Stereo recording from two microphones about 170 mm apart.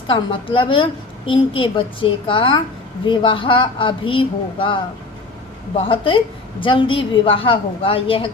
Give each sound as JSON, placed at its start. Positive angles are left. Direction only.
{"t": 0.1, "sound": "a woman's voice", "side_deg": 30}